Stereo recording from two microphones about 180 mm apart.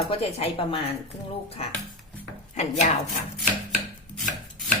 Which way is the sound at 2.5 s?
40° left (ahead or behind).